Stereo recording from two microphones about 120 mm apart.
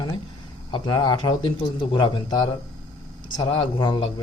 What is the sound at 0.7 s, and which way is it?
A man's voice, 35° left (ahead or behind).